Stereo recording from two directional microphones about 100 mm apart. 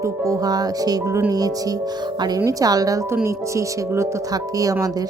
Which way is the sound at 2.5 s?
35° right (ahead or behind).